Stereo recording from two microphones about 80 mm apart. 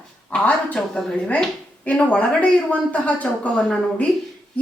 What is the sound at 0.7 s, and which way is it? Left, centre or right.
A woman's voice, centre.